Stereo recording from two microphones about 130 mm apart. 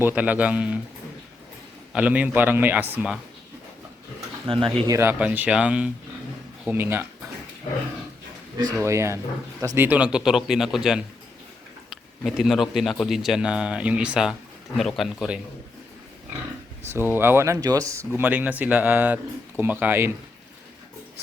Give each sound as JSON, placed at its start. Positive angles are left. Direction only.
{"t": 0.0, "sound": "speech", "side_deg": -15}
{"t": 1.9, "sound": "speech", "side_deg": -10}
{"t": 4.4, "sound": "speech", "side_deg": -40}
{"t": 4.9, "sound": "speech", "side_deg": -20}
{"t": 8.5, "sound": "speech", "side_deg": -25}
{"t": 17.1, "sound": "speech", "side_deg": -15}
{"t": 18.2, "sound": "speech", "side_deg": -15}